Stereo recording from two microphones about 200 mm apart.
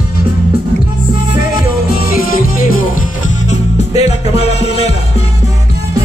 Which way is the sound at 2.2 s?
45° left (ahead or behind).